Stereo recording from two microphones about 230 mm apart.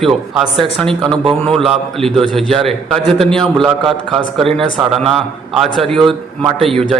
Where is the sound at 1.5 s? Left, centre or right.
Centre.